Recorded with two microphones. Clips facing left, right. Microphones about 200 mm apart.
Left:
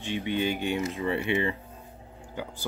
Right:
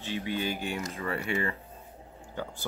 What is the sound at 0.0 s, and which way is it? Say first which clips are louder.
Speech: left 4 dB; 20° left (ahead or behind).